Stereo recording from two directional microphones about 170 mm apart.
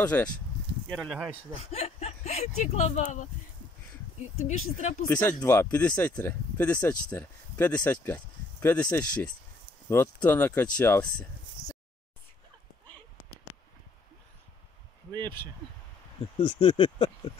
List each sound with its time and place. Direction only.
0.0 s speech: 10° left (ahead or behind)
1.6 s speech: 40° left (ahead or behind)
4.5 s speech: 45° left (ahead or behind)
5.0 s speech: 10° left (ahead or behind)
16.3 s speech: 30° left (ahead or behind)